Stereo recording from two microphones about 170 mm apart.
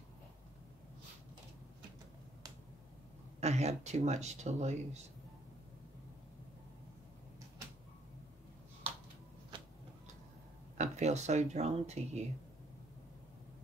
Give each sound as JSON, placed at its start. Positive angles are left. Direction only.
{"t": 3.3, "sound": "speech", "side_deg": -40}
{"t": 9.5, "sound": "tick-tock", "side_deg": -30}
{"t": 10.8, "sound": "speech", "side_deg": -40}